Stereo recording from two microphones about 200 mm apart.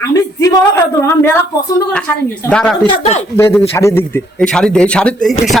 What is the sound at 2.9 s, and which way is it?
Speech, 35° left (ahead or behind).